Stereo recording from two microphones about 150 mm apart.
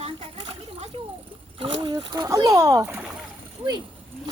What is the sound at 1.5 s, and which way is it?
Speech, 35° right (ahead or behind).